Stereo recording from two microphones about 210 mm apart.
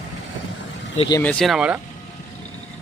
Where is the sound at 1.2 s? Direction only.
5° left (ahead or behind).